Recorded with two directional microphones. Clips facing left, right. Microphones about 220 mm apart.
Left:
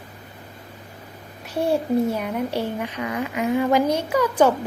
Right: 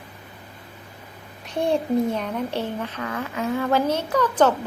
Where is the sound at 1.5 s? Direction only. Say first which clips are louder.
Left 1 dB; 5° left (ahead or behind).